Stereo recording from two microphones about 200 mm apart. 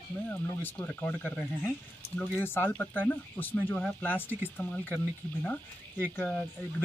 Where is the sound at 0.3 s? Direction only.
10° left (ahead or behind).